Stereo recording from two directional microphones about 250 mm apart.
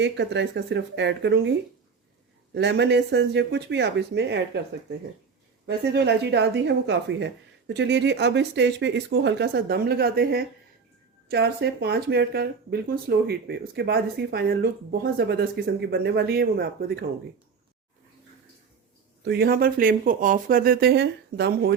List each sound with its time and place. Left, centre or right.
0.0 s speech: right
2.6 s speech: right
19.2 s speech: right